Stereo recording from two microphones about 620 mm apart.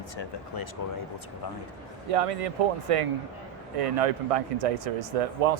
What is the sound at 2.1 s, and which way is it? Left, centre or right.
Speech, right.